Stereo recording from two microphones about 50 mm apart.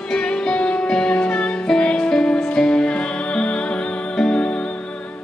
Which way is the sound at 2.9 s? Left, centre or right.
Left.